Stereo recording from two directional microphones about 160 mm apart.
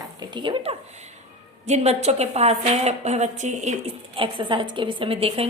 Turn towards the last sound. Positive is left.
turn(degrees=-40)  # may be behind; listen again after turning